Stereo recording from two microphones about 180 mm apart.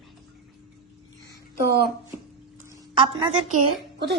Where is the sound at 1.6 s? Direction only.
60° right (ahead or behind).